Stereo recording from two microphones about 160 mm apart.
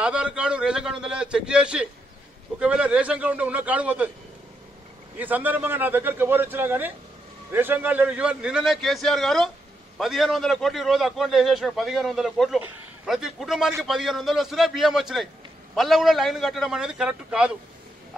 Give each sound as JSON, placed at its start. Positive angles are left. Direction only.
{"t": 0.0, "sound": "a man's voice", "side_deg": -5}
{"t": 5.2, "sound": "a man's voice", "side_deg": -10}